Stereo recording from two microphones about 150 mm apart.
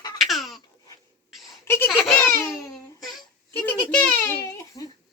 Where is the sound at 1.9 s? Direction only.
Centre (ahead or behind).